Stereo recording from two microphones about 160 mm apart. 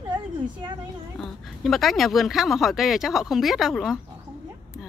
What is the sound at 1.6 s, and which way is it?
Speech, centre (ahead or behind).